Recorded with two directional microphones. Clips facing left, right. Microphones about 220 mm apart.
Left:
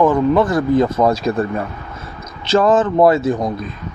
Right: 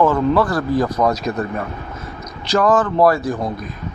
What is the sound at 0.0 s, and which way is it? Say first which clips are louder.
Speech: left 2 dB; 20° left (ahead or behind).